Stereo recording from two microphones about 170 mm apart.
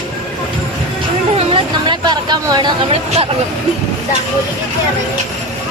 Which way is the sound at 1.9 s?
25° right (ahead or behind).